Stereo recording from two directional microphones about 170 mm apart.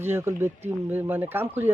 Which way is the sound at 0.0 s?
15° right (ahead or behind).